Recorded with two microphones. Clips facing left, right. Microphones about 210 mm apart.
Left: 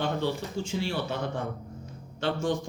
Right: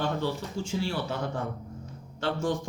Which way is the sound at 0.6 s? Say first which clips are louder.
Left 1 dB; 25° left (ahead or behind).